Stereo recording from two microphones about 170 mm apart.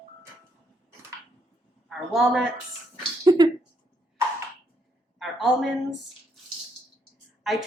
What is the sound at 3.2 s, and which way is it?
Speech, 20° right (ahead or behind).